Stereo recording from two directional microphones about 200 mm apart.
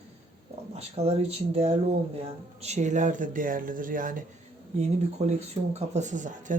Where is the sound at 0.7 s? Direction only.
30° right (ahead or behind).